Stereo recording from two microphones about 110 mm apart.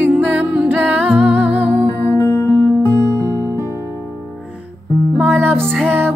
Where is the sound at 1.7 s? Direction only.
15° left (ahead or behind).